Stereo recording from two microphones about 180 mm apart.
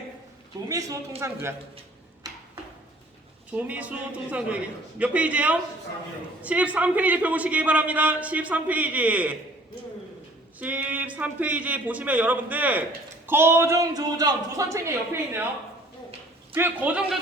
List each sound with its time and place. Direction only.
0.7 s a man's voice: 20° right (ahead or behind)
2.3 s a sound: 20° right (ahead or behind)
3.5 s a man's voice: 10° right (ahead or behind)
10.6 s a man's voice: 10° right (ahead or behind)
16.6 s a man's voice: 10° right (ahead or behind)